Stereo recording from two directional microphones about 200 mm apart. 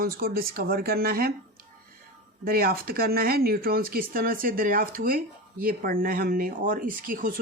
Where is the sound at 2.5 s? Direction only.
50° right (ahead or behind).